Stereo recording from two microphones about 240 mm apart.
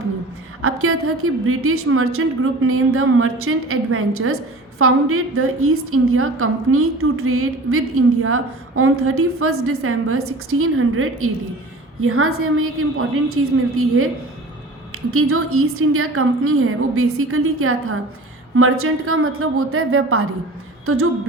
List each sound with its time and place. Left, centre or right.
0.6 s a woman's voice: right